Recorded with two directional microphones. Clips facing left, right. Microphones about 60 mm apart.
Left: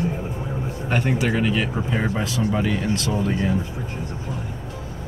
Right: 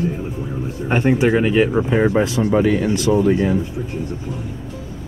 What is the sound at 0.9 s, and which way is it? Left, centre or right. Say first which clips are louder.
Speech: right 7 dB; right.